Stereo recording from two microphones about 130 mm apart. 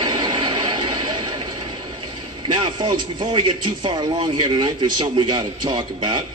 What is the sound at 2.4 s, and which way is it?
A man's voice, 35° right (ahead or behind).